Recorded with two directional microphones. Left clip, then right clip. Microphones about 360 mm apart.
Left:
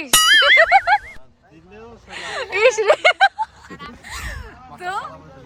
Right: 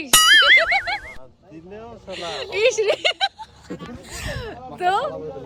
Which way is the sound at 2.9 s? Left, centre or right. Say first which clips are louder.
Left 7 dB; centre.